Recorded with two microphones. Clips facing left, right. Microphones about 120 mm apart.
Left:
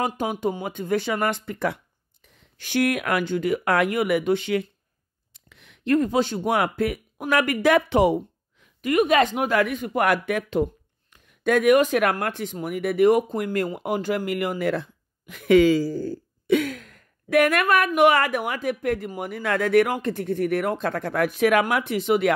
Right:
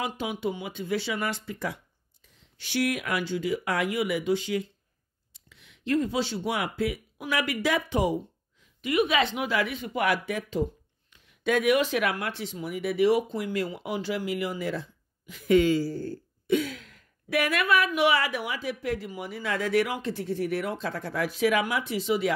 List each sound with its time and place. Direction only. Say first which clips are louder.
0.0 s speech: left 5 dB; 45° left (ahead or behind); by 8.9 s 65° left (ahead or behind)
8.9 s speech: left 5 dB; 45° left (ahead or behind); by 15.8 s 90° left
16.6 s speech: left 6 dB; 50° left (ahead or behind)